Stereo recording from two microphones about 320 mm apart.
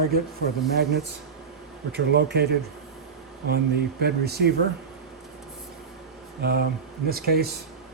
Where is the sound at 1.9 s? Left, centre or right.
Right.